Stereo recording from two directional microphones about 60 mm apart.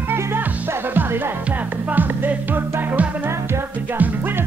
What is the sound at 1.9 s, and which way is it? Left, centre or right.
Music, right.